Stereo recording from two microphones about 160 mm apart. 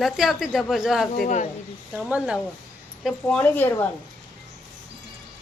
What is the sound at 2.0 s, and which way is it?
Speech, 5° right (ahead or behind).